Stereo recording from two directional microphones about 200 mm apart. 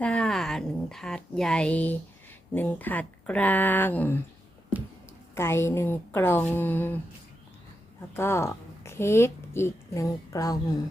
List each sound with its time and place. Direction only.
0.0 s speech: 5° left (ahead or behind)
5.3 s speech: 10° left (ahead or behind)
8.1 s a woman's voice: 10° left (ahead or behind)